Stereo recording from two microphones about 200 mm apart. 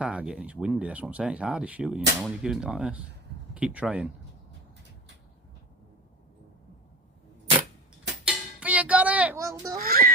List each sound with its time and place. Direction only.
0.0 s speech: 5° right (ahead or behind)
8.2 s a sound: 5° right (ahead or behind)
9.7 s music: 45° right (ahead or behind)